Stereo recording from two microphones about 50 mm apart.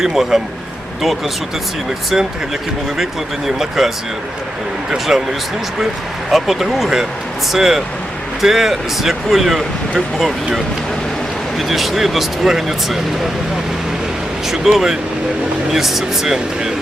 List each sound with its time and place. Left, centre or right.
0.0 s speech: centre
3.0 s speech: centre
6.3 s speech: centre
14.4 s speech: centre